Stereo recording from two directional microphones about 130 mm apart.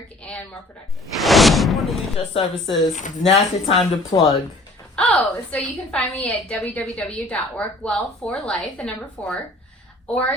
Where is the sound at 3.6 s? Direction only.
50° left (ahead or behind).